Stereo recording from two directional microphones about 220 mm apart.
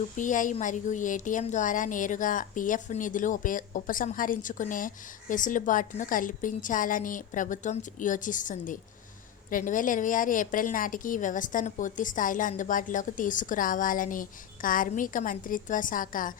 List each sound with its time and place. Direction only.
0.2 s a woman's voice: 35° left (ahead or behind)